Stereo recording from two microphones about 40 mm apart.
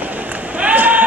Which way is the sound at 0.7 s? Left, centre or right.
Right.